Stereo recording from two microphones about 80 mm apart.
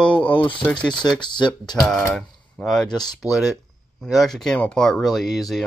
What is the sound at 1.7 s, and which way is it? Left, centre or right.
Speech, centre.